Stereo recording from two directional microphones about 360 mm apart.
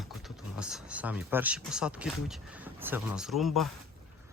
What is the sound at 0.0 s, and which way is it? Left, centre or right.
Speech, centre.